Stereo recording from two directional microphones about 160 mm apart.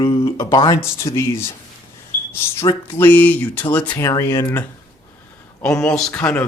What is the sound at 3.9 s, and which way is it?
Speech, 25° left (ahead or behind).